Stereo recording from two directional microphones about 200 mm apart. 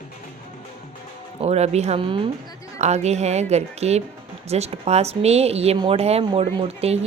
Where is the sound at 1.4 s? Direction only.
35° right (ahead or behind).